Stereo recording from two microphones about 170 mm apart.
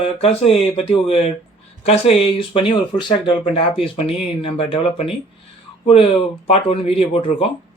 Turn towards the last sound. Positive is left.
turn(degrees=35)  # may be behind; listen again after turning